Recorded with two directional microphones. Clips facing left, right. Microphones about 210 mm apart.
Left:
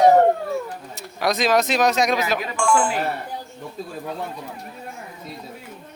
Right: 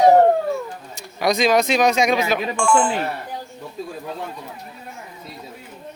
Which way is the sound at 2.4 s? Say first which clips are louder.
Right 2 dB; 30° right (ahead or behind).